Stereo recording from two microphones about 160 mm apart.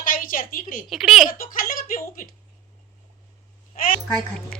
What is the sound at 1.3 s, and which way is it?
Speech, 60° left (ahead or behind).